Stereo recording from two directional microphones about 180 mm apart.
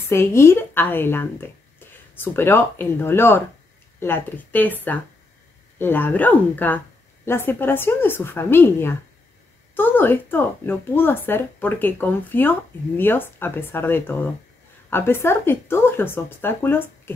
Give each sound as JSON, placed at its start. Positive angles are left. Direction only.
{"t": 0.1, "sound": "speech", "side_deg": 15}